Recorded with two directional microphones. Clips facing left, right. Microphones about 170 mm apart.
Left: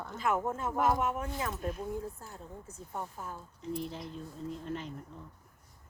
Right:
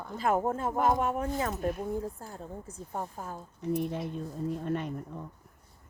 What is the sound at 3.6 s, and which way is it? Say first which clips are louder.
Speech: right 7 dB; 65° right (ahead or behind).